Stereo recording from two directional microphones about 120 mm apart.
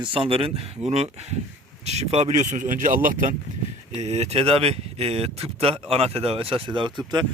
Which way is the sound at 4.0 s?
65° right (ahead or behind).